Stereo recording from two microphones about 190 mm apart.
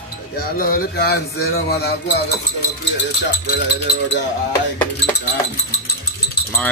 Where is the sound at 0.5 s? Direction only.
50° left (ahead or behind).